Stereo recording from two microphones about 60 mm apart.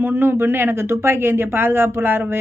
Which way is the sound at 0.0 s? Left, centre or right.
Right.